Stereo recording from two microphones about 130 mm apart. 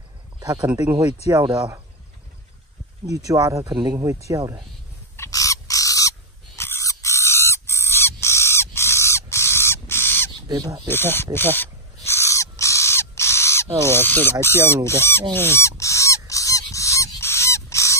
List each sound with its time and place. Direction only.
0.4 s speech: 30° right (ahead or behind)
3.1 s speech: 30° right (ahead or behind)
5.1 s bird: 25° left (ahead or behind)
10.5 s speech: 30° right (ahead or behind)
10.9 s speech: 15° left (ahead or behind)
11.5 s owl: 15° left (ahead or behind)
14.4 s speech: 20° left (ahead or behind)
15.8 s goose: 25° left (ahead or behind)